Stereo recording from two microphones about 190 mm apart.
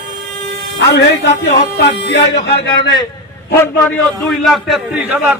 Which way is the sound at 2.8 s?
25° left (ahead or behind).